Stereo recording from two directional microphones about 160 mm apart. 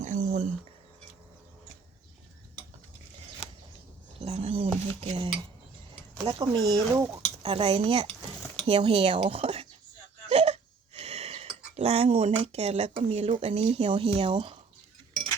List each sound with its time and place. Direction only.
0.0 s a sound: 50° right (ahead or behind)
4.2 s a sound: 40° right (ahead or behind)
4.9 s speech: 35° right (ahead or behind)
7.4 s speech: 40° right (ahead or behind)
10.2 s hiccup: 40° right (ahead or behind)
14.2 s speech: 35° right (ahead or behind)